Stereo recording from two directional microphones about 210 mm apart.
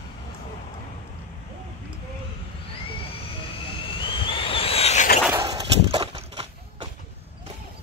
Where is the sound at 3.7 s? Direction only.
25° left (ahead or behind).